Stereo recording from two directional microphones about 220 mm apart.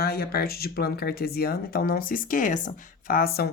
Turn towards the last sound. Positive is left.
turn(degrees=45)  # may be behind; listen again after turning